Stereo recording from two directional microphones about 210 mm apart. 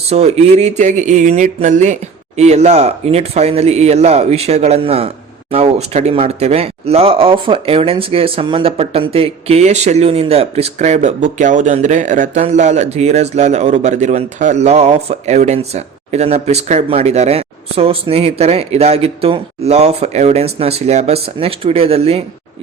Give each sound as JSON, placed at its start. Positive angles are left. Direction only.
{"t": 0.1, "sound": "speech", "side_deg": -30}